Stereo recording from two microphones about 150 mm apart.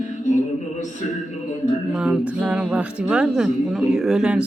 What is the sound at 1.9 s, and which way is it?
A woman's voice, 5° right (ahead or behind).